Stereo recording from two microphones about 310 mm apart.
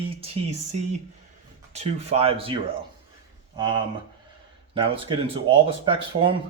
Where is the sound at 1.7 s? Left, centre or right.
Centre.